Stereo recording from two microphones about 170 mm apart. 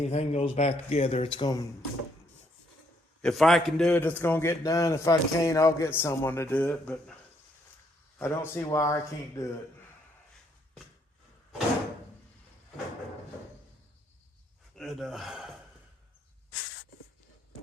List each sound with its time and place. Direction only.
0.0 s speech: 40° left (ahead or behind)
3.2 s a man's voice: centre (ahead or behind)
8.2 s a man's voice: 15° left (ahead or behind)
14.8 s speech: centre (ahead or behind)